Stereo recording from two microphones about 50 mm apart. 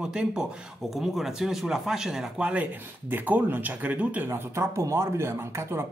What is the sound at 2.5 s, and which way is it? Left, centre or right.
Speech, right.